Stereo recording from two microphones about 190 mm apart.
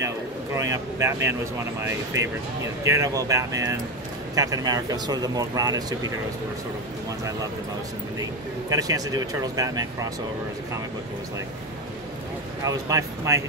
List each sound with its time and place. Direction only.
0.0 s speech: 15° right (ahead or behind)
8.6 s speech: 20° right (ahead or behind)
12.6 s speech: 15° right (ahead or behind)